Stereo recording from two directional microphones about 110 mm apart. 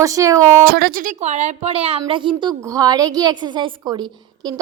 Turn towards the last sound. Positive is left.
turn(degrees=-45)  # may be behind; listen again after turning